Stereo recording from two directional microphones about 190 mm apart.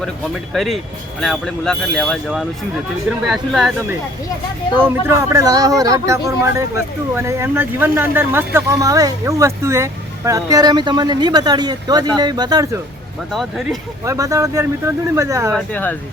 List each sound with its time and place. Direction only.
0.5 s speech: centre (ahead or behind)
4.8 s speech: 15° right (ahead or behind)
13.3 s speech: centre (ahead or behind)
14.0 s speech: 15° right (ahead or behind)
15.5 s speech: 10° left (ahead or behind)